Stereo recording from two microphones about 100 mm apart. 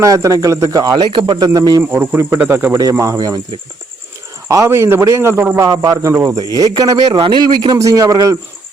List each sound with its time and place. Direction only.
0.0 s speech: 35° right (ahead or behind)
1.8 s speech: 20° right (ahead or behind)
3.0 s speech: 35° right (ahead or behind)
4.4 s speech: 30° right (ahead or behind); by 7.8 s 45° right (ahead or behind)
7.8 s speech: 35° right (ahead or behind)